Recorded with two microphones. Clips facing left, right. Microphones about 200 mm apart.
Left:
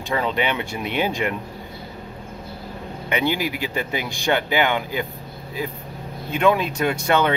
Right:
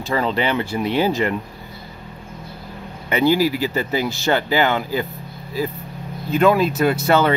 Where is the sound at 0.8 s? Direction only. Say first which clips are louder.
Right 4 dB; 35° right (ahead or behind).